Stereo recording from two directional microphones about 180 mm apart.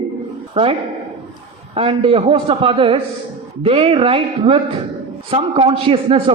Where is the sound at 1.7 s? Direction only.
30° right (ahead or behind).